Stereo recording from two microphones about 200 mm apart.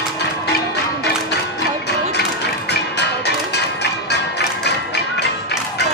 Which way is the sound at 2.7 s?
55° left (ahead or behind).